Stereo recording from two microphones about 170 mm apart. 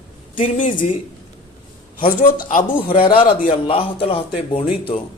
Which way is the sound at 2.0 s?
55° left (ahead or behind).